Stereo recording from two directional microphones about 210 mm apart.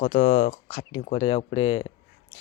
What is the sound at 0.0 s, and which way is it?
Speech, 40° left (ahead or behind).